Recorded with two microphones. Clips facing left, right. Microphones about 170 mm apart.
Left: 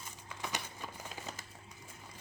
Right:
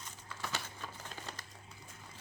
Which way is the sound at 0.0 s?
15° left (ahead or behind).